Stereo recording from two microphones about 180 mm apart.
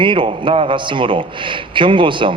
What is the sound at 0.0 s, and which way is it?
A man's voice, 25° right (ahead or behind).